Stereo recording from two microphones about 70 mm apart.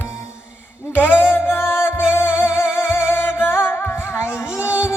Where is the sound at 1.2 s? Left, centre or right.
Left.